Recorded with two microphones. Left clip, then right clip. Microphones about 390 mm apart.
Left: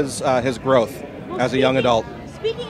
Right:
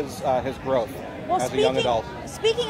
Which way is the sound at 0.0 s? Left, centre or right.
Left.